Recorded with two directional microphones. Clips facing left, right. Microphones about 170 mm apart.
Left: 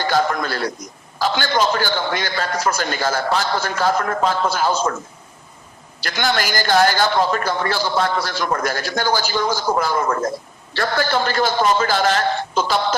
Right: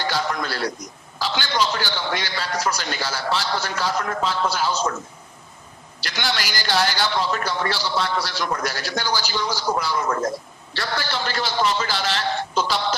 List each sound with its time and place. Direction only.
0.0 s a sound: 50° left (ahead or behind)
1.2 s speech: 50° left (ahead or behind)
6.0 s speech: 50° left (ahead or behind)